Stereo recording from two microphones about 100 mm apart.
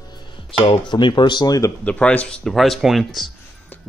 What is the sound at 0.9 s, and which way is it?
Speech, 45° left (ahead or behind).